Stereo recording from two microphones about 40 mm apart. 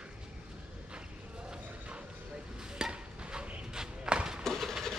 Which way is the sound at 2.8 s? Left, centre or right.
Centre.